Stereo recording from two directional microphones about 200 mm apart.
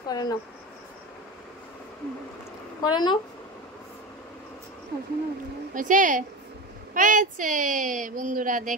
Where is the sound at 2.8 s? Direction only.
20° left (ahead or behind).